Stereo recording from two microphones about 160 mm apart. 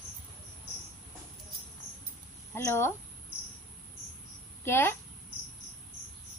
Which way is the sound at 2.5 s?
15° left (ahead or behind).